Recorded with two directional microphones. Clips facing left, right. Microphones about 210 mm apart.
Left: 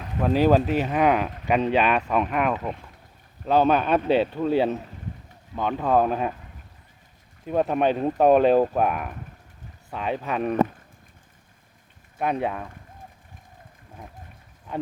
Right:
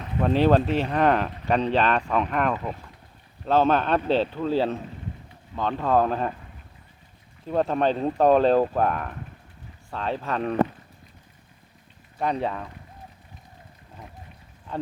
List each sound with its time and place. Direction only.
0.0 s speech: centre (ahead or behind)
7.4 s speech: 10° left (ahead or behind)
12.2 s speech: 10° left (ahead or behind)